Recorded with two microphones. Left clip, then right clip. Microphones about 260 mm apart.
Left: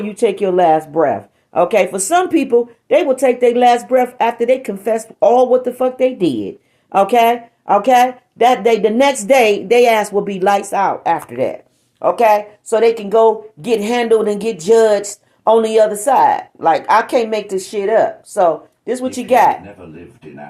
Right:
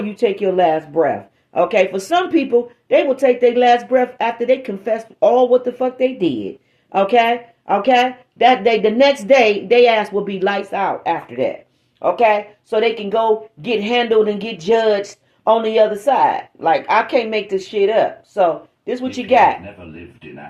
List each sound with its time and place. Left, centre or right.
0.1 s speech: left